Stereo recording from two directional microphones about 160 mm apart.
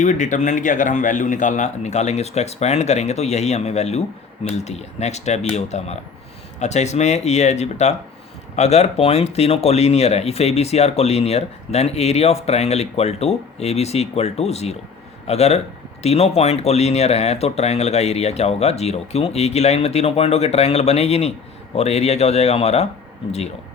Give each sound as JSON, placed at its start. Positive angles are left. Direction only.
{"t": 0.0, "sound": "speech", "side_deg": 50}